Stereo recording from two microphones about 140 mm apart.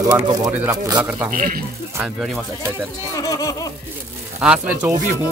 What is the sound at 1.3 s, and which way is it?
Speech, 90° right.